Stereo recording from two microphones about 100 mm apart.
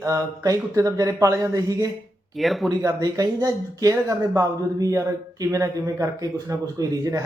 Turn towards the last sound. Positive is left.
turn(degrees=-35)  # may be behind; listen again after turning